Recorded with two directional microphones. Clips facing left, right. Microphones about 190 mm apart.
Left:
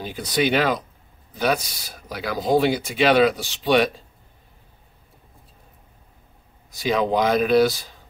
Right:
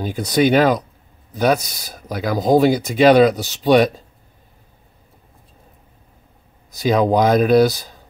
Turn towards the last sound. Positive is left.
turn(degrees=-40)  # may be behind; listen again after turning